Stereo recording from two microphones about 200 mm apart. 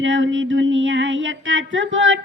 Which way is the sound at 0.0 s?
70° right (ahead or behind).